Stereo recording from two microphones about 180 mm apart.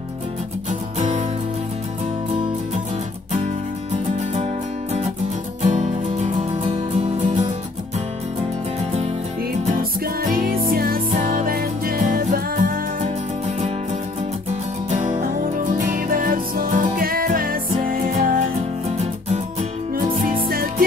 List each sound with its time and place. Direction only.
3.9 s music: 35° right (ahead or behind)
5.6 s music: 40° right (ahead or behind)
10.3 s music: 55° right (ahead or behind)
14.9 s music: 45° right (ahead or behind)
18.9 s music: 35° right (ahead or behind)
20.4 s music: 55° right (ahead or behind)